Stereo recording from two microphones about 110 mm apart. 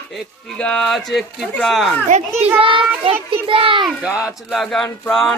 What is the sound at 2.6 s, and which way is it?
A child's voice, 50° right (ahead or behind).